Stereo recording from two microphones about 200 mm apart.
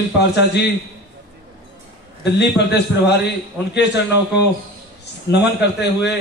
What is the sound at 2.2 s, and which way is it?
Speech, 55° left (ahead or behind).